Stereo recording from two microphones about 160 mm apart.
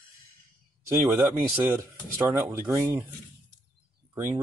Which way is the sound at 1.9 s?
15° right (ahead or behind).